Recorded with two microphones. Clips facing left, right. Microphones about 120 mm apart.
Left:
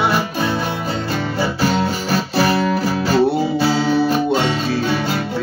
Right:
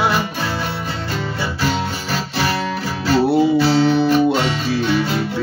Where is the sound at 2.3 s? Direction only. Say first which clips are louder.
Left 5 dB; 35° left (ahead or behind).